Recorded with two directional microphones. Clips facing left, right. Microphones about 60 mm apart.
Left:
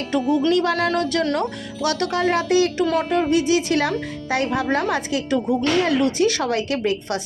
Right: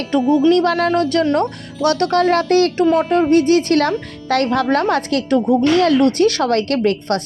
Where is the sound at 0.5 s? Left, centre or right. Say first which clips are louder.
Right 4 dB; right.